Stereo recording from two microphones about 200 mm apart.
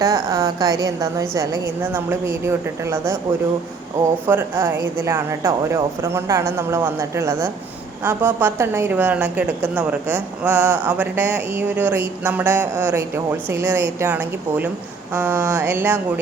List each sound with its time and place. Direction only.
0.0 s a woman's voice: 15° right (ahead or behind)
4.3 s a woman's voice: 10° right (ahead or behind)